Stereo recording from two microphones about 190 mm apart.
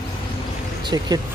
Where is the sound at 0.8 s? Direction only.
20° right (ahead or behind).